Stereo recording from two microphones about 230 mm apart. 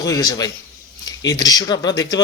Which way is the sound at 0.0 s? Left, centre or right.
Centre.